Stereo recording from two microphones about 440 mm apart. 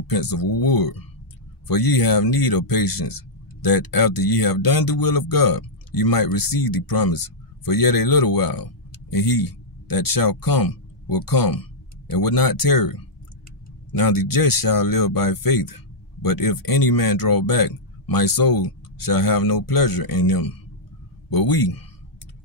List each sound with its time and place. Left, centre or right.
0.0 s speech: left